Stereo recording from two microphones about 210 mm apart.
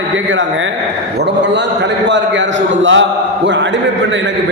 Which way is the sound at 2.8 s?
60° right (ahead or behind).